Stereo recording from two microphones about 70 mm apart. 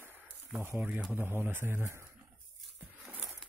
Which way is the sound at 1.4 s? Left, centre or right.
Right.